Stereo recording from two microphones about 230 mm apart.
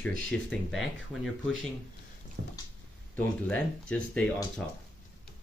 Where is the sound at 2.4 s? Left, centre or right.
Right.